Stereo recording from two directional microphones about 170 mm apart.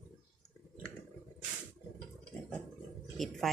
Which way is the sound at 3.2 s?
Centre (ahead or behind).